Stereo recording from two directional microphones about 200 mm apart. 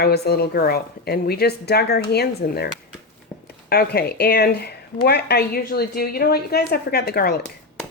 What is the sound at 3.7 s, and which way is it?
A woman's voice, 50° left (ahead or behind).